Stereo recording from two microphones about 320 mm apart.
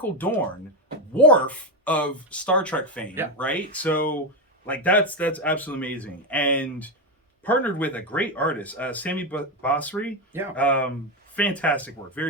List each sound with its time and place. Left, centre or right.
0.0 s speech: centre
3.9 s speech: left
4.6 s speech: centre